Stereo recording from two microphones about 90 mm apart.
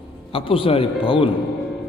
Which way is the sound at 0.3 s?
90° left.